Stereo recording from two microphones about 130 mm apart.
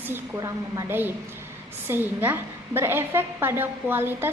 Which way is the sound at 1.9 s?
15° right (ahead or behind).